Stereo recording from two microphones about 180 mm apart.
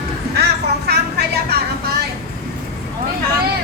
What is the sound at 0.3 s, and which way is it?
Vehicle, 65° right (ahead or behind).